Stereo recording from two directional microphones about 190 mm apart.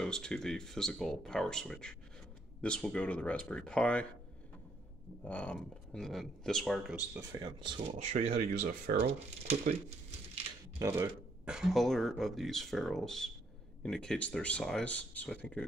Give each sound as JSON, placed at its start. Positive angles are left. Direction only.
{"t": 0.0, "sound": "speech", "side_deg": 5}
{"t": 5.2, "sound": "speech", "side_deg": 5}
{"t": 7.2, "sound": "speech", "side_deg": -20}
{"t": 9.5, "sound": "speech", "side_deg": -35}
{"t": 10.8, "sound": "speech", "side_deg": -10}